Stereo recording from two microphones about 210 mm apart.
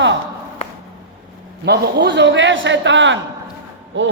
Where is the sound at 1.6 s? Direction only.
50° right (ahead or behind).